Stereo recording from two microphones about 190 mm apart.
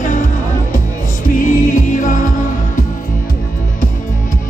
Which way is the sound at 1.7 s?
45° left (ahead or behind).